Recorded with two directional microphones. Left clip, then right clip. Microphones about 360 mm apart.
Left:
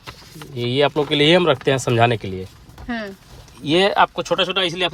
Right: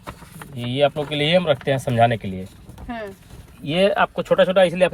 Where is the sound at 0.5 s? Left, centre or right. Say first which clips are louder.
Left 2 dB; left.